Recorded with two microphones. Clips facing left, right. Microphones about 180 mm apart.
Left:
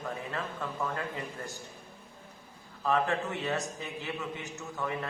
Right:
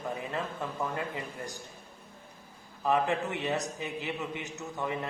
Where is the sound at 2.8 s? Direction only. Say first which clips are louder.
Right 1 dB; 15° right (ahead or behind).